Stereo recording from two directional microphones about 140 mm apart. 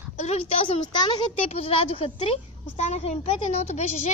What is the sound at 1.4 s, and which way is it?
Speech, 45° left (ahead or behind).